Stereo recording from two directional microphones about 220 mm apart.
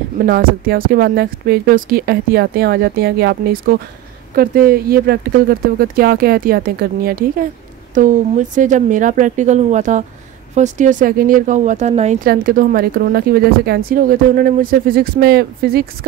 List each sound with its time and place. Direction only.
0.3 s speech: 40° right (ahead or behind)
12.3 s speech: 40° right (ahead or behind)